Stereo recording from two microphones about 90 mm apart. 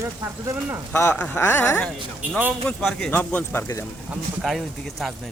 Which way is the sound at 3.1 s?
15° left (ahead or behind).